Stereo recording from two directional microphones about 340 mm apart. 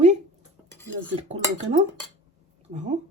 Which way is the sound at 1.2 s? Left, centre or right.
Centre.